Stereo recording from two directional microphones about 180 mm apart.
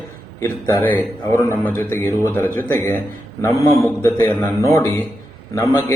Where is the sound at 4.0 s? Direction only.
15° left (ahead or behind).